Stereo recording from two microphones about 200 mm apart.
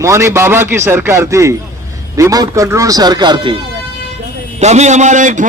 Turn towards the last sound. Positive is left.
turn(degrees=-40)  # may be behind; listen again after turning